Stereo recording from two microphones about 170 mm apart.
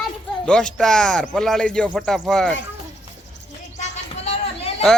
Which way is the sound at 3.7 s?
40° left (ahead or behind).